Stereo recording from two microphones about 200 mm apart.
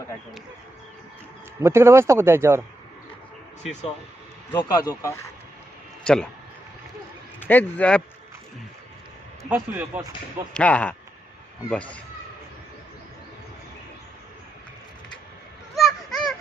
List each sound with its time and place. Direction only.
1.6 s speech: 10° right (ahead or behind)
3.6 s speech: 35° left (ahead or behind)
4.5 s speech: 20° left (ahead or behind)
7.3 s a man's voice: 10° left (ahead or behind)
9.4 s speech: 10° right (ahead or behind)
10.5 s speech: 5° left (ahead or behind)
15.7 s a sound: centre (ahead or behind)